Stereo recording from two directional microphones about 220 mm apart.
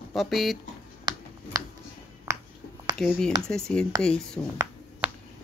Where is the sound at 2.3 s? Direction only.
10° right (ahead or behind).